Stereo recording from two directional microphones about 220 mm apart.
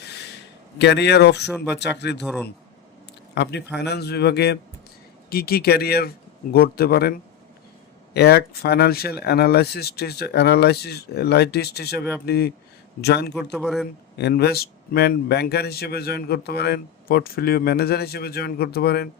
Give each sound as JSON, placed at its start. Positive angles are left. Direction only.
{"t": 0.8, "sound": "speech", "side_deg": 50}
{"t": 2.2, "sound": "speech", "side_deg": 0}
{"t": 3.3, "sound": "speech", "side_deg": 50}
{"t": 8.1, "sound": "speech", "side_deg": 45}
{"t": 13.3, "sound": "speech", "side_deg": 0}
{"t": 14.2, "sound": "speech", "side_deg": 50}